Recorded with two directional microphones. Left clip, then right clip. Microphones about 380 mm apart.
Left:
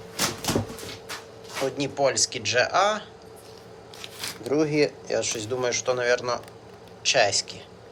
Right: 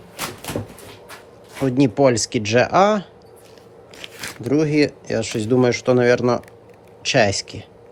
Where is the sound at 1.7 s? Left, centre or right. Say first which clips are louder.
Right 9 dB; centre.